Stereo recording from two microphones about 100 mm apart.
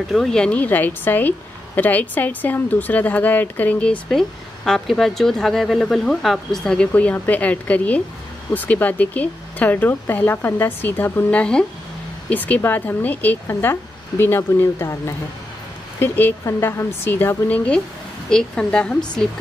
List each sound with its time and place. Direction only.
0.1 s speech: 5° left (ahead or behind)
4.1 s speech: 5° left (ahead or behind)